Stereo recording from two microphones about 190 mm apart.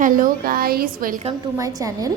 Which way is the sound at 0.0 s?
45° right (ahead or behind).